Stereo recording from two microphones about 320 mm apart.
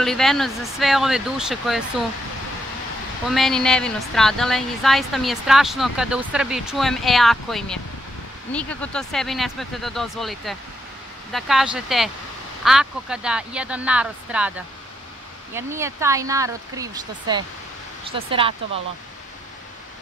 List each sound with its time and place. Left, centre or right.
0.0 s a woman's voice: centre
3.3 s a woman's voice: centre
15.5 s speech: centre